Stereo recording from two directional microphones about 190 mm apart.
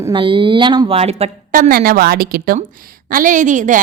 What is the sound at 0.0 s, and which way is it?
A woman's voice, 25° right (ahead or behind).